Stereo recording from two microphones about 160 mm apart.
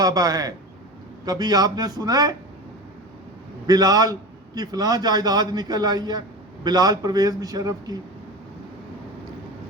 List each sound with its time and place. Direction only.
0.0 s a man's voice: 25° right (ahead or behind)
3.7 s a man's voice: 25° right (ahead or behind)